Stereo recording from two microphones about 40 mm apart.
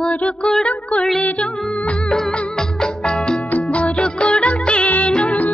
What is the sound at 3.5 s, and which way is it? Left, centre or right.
Music, left.